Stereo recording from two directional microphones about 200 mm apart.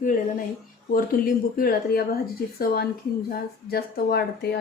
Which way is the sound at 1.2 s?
45° left (ahead or behind).